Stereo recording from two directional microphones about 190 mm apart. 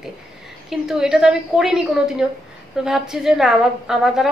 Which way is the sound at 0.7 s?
Centre (ahead or behind).